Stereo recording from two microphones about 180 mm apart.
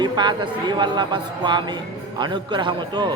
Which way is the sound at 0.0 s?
25° right (ahead or behind).